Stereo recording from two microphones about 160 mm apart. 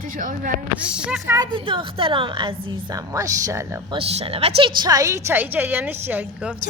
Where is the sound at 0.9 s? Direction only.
5° right (ahead or behind).